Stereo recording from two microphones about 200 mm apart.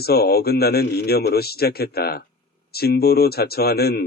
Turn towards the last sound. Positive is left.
turn(degrees=50)  # may be behind; listen again after turning